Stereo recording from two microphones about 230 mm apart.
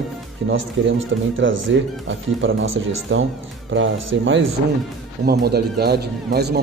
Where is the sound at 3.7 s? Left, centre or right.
Right.